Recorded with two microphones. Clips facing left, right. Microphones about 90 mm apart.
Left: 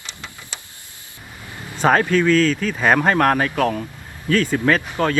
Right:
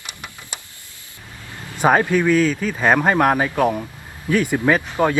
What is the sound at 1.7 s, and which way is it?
Speech, 15° right (ahead or behind).